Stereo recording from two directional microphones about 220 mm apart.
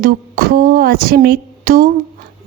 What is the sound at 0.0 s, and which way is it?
A woman's voice, 40° right (ahead or behind).